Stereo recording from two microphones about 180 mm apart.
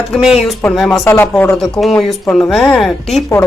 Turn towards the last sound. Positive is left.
turn(degrees=0)  # may be behind; listen again after turning